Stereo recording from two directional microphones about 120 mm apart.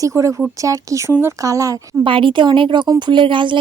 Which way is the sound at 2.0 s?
45° right (ahead or behind).